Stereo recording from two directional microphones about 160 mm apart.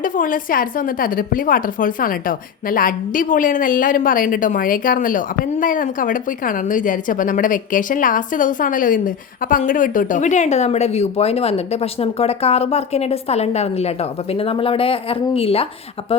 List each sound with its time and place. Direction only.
0.0 s a woman's voice: 60° left (ahead or behind); by 15.6 s 35° left (ahead or behind)